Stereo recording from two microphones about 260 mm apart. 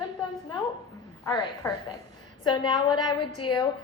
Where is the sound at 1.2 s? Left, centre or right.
Centre.